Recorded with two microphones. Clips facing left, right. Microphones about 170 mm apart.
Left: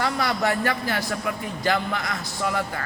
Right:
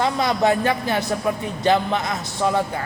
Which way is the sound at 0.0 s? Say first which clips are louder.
Right 5 dB; 20° right (ahead or behind).